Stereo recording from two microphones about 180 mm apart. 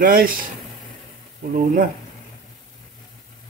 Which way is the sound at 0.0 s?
55° right (ahead or behind).